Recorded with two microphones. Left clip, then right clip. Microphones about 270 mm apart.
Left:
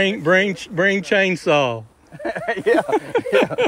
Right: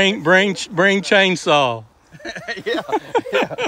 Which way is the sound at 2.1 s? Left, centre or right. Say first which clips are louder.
Left 5 dB; centre.